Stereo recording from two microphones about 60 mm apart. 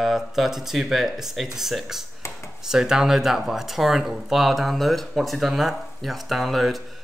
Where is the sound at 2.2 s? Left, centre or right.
Left.